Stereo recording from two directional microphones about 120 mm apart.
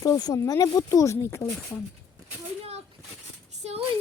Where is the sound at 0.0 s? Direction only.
30° left (ahead or behind).